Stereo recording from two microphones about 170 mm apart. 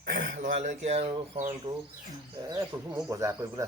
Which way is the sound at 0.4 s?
45° right (ahead or behind).